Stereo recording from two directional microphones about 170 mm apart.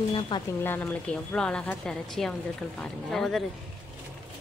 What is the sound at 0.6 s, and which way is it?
A woman's voice, 10° left (ahead or behind).